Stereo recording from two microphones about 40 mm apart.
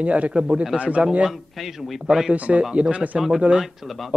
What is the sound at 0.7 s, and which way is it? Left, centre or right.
Speech, right.